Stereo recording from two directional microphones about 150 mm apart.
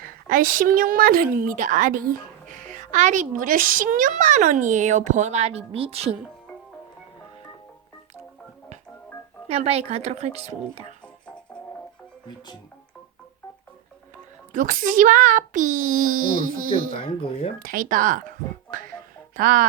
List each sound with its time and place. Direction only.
0.0 s a woman's voice: 70° right (ahead or behind)
2.7 s speech: 55° right (ahead or behind)
9.5 s a woman's voice: 45° right (ahead or behind)
14.5 s speech: 65° right (ahead or behind)
17.0 s speech: 40° left (ahead or behind)
17.6 s a woman's voice: 70° right (ahead or behind)